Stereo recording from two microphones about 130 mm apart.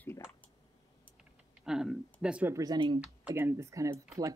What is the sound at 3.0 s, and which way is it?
Speech, 15° right (ahead or behind).